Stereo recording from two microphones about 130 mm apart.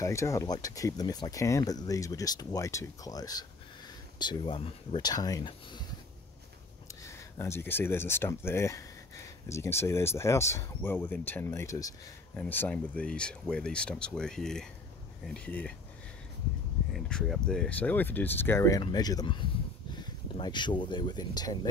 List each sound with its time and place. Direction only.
0.0 s speech: 25° left (ahead or behind)
7.1 s speech: 20° left (ahead or behind)
16.9 s speech: 5° left (ahead or behind); by 21.5 s 30° left (ahead or behind)